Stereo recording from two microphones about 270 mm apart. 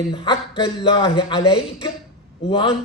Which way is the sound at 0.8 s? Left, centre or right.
Centre.